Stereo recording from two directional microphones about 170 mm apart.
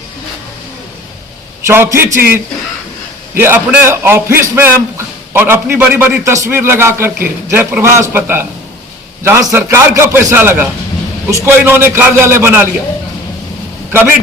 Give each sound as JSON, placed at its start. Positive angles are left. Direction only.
{"t": 1.6, "sound": "a man's voice", "side_deg": -15}
{"t": 3.3, "sound": "a man's voice", "side_deg": -10}